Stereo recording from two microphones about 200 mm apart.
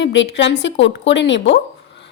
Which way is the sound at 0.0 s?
65° left (ahead or behind).